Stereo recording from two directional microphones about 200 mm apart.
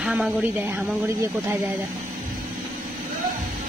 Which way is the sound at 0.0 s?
5° right (ahead or behind).